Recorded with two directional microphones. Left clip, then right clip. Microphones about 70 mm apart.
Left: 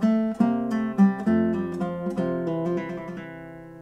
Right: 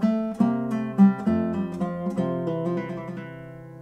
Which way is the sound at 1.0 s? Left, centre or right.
Centre.